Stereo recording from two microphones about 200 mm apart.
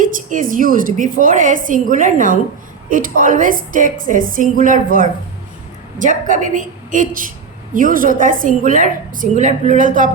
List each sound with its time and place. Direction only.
0.0 s a woman's voice: 40° right (ahead or behind)
6.0 s a woman's voice: 40° right (ahead or behind)